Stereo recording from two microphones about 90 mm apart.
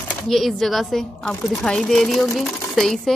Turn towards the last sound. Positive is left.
turn(degrees=0)  # may be behind; listen again after turning